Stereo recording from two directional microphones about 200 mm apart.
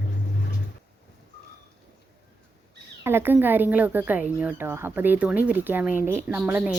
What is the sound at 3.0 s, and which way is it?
A woman's voice, 10° right (ahead or behind).